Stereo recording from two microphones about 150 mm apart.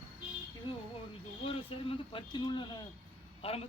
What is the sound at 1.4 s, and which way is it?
A man's voice, 35° left (ahead or behind).